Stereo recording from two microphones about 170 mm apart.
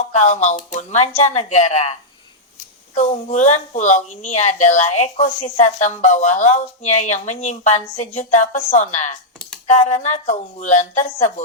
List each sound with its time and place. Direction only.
0.0 s speech: 45° left (ahead or behind)